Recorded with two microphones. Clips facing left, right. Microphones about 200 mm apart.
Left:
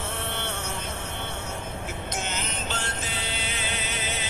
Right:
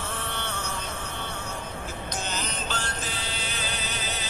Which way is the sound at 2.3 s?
25° left (ahead or behind).